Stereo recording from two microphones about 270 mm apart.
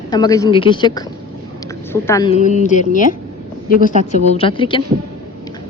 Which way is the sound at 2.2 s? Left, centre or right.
Left.